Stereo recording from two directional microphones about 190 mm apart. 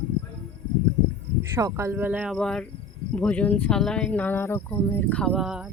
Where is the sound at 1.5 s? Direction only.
15° right (ahead or behind).